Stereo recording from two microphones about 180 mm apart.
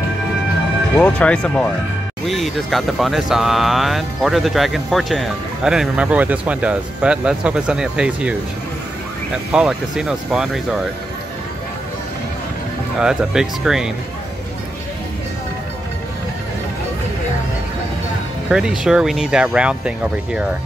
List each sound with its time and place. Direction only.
0.9 s speech: 10° left (ahead or behind)
9.5 s speech: 5° right (ahead or behind)
13.0 s speech: 5° right (ahead or behind)
18.5 s speech: 5° right (ahead or behind)